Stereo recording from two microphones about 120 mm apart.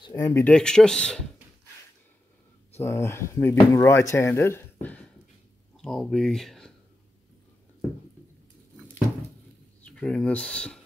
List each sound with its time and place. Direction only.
0.0 s speech: 30° left (ahead or behind)
0.4 s speech: 5° left (ahead or behind)
2.8 s speech: 20° left (ahead or behind)
5.8 s speech: 5° left (ahead or behind)
9.8 s speech: 5° left (ahead or behind)